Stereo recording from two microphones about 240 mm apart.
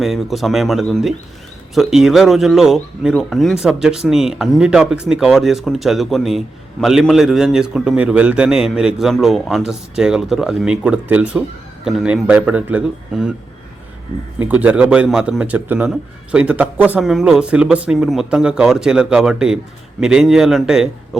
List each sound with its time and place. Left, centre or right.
0.0 s a man's voice: centre
14.3 s a man's voice: centre